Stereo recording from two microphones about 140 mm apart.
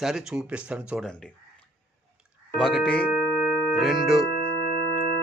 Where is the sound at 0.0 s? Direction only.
5° right (ahead or behind).